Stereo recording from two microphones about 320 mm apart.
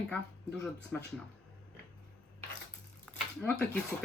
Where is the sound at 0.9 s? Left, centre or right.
Centre.